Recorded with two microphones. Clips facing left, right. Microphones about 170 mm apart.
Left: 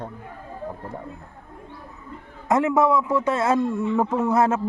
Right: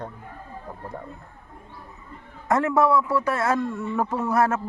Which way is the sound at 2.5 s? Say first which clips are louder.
Left 1 dB; 15° left (ahead or behind).